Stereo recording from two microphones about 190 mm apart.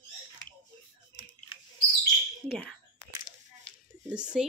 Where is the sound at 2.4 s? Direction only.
5° left (ahead or behind).